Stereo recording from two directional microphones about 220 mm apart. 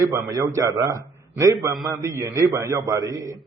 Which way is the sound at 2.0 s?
15° right (ahead or behind).